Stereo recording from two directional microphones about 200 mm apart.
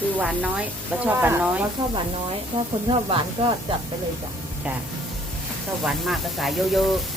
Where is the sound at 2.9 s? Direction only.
25° right (ahead or behind).